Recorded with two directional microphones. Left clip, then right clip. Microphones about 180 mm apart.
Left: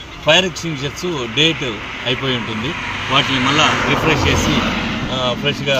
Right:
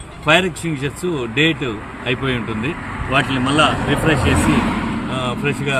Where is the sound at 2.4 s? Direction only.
25° left (ahead or behind).